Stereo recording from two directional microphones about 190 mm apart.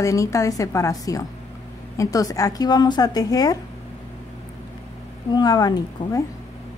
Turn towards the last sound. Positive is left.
turn(degrees=20)  # may be behind; listen again after turning